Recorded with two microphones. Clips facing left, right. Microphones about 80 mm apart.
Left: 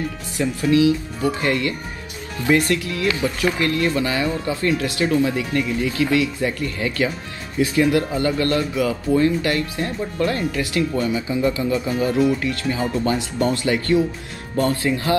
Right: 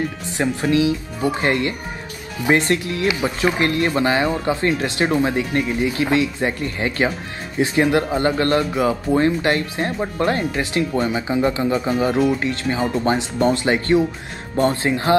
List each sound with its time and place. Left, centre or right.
0.4 s speech: right
12.0 s speech: right